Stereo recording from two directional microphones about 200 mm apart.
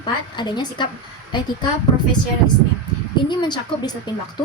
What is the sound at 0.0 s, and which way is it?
Speech, 20° left (ahead or behind).